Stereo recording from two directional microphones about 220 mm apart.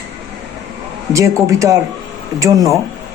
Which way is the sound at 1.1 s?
15° right (ahead or behind).